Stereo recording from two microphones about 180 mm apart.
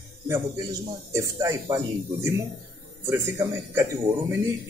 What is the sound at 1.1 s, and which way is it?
A man's voice, 15° right (ahead or behind).